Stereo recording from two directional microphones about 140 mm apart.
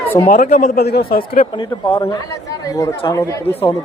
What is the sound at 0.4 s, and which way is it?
A man's voice, 90° left.